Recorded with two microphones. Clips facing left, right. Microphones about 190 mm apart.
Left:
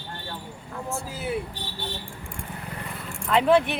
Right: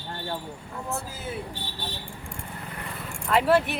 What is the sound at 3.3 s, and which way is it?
Speech, 5° right (ahead or behind).